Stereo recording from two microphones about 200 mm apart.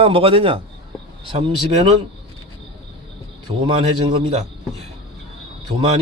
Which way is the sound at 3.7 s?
25° right (ahead or behind).